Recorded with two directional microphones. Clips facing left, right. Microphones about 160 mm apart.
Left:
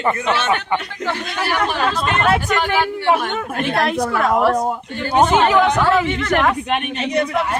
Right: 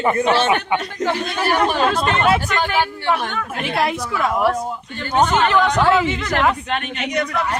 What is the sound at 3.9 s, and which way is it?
Speech, 60° left (ahead or behind).